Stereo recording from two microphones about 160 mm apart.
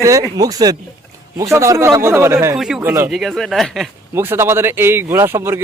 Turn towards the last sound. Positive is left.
turn(degrees=-15)  # may be behind; listen again after turning